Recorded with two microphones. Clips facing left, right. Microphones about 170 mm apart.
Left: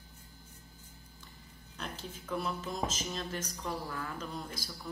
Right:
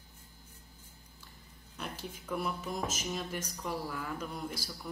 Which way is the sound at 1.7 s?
10° right (ahead or behind).